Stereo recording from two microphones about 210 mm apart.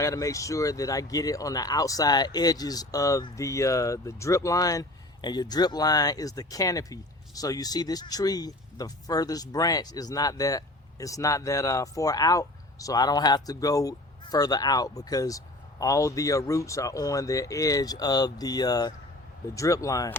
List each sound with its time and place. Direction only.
0.0 s speech: 15° left (ahead or behind)